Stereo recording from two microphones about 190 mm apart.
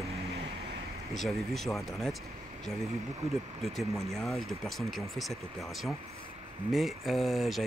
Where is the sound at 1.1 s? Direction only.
Centre (ahead or behind).